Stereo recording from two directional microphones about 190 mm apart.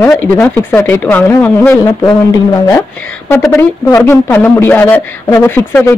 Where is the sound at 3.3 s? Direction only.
15° left (ahead or behind).